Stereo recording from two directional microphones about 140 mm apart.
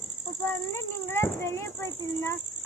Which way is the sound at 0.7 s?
20° left (ahead or behind).